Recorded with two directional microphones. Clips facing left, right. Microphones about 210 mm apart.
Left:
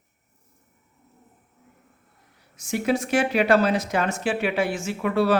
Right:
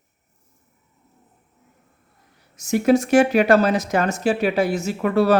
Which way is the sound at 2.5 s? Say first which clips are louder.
Right 7 dB; 45° right (ahead or behind).